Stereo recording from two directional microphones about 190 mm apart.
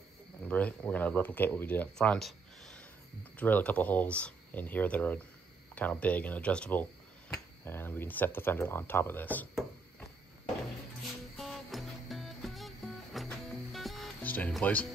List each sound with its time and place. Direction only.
0.4 s speech: 10° left (ahead or behind)
11.3 s music: centre (ahead or behind)